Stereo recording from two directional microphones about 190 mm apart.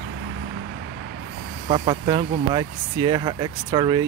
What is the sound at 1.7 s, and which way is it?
Speech, 25° right (ahead or behind).